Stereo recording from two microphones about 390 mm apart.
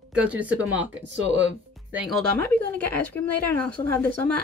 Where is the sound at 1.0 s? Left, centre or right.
Right.